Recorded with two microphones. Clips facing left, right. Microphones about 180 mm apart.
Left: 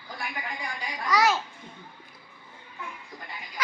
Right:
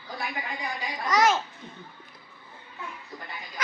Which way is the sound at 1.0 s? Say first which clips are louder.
Right 1 dB; 20° right (ahead or behind).